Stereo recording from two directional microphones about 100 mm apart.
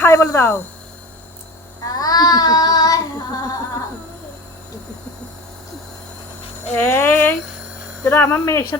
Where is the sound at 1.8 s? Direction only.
40° left (ahead or behind).